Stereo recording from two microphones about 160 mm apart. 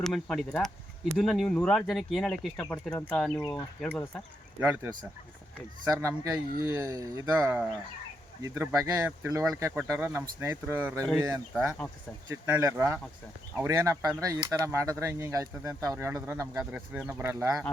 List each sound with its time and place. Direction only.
0.0 s speech: centre (ahead or behind)
4.6 s speech: 15° right (ahead or behind)
5.9 s speech: 15° right (ahead or behind)
11.5 s speech: centre (ahead or behind)
12.3 s speech: 20° right (ahead or behind)